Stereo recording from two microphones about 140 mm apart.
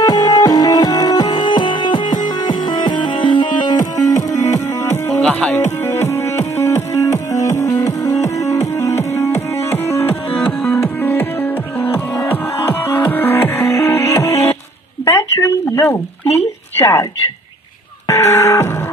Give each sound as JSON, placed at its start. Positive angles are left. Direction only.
{"t": 0.0, "sound": "music", "side_deg": 25}
{"t": 3.7, "sound": "music", "side_deg": 60}
{"t": 4.1, "sound": "music", "side_deg": 25}
{"t": 5.2, "sound": "music", "side_deg": 5}
{"t": 15.0, "sound": "a sound", "side_deg": 20}
{"t": 18.0, "sound": "a sound", "side_deg": 20}